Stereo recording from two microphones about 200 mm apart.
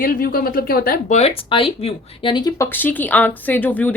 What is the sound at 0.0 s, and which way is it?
Speech, 45° left (ahead or behind).